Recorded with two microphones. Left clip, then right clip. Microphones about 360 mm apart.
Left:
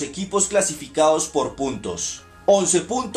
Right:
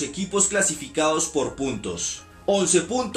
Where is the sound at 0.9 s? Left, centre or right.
Centre.